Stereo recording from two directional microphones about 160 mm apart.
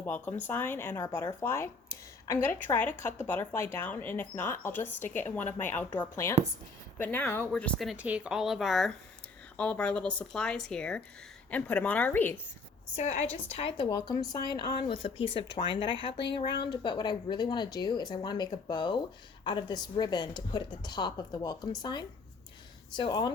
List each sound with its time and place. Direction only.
0.0 s speech: 10° left (ahead or behind)
5.9 s speech: 25° left (ahead or behind)
7.0 s speech: 10° left (ahead or behind)
13.0 s a woman's voice: 45° left (ahead or behind)
14.1 s a woman's voice: 25° left (ahead or behind)